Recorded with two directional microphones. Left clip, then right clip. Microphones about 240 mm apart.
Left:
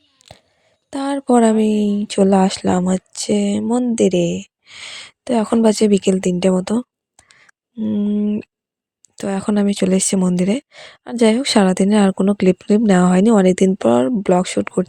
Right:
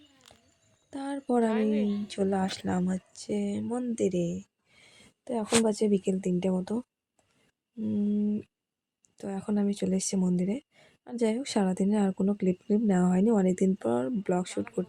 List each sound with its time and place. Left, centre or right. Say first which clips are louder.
0.9 s speech: left 14 dB; left